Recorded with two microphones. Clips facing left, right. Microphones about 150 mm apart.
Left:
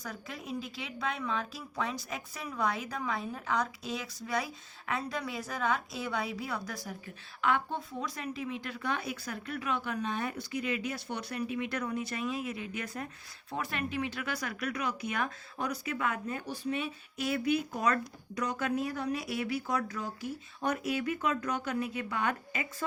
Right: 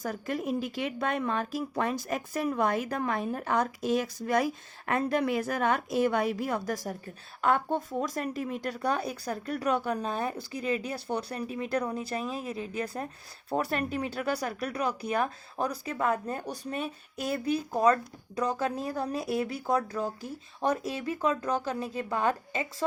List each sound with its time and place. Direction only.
0.0 s speech: 50° right (ahead or behind); by 22.6 s 30° right (ahead or behind)